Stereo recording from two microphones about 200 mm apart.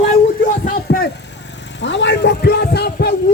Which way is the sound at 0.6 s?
50° left (ahead or behind).